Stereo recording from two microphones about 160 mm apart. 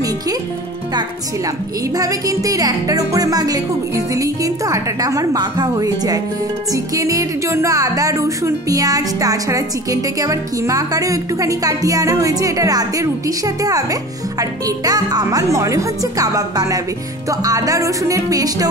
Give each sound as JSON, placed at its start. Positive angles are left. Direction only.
{"t": 2.0, "sound": "speech", "side_deg": -20}